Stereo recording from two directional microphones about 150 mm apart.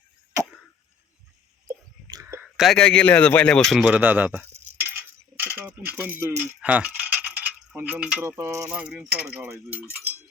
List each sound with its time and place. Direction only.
2.1 s a sound: 20° right (ahead or behind)
2.6 s a man's voice: 5° left (ahead or behind)
3.9 s speech: 10° right (ahead or behind)
5.4 s a sound: 15° right (ahead or behind)
8.2 s speech: 20° right (ahead or behind)
8.7 s speech: 5° right (ahead or behind)